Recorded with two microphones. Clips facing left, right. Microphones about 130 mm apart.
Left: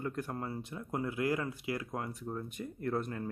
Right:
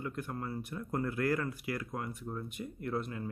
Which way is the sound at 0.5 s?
20° left (ahead or behind).